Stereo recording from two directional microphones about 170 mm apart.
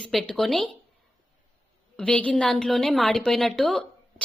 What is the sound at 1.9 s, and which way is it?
A woman's voice, 5° left (ahead or behind).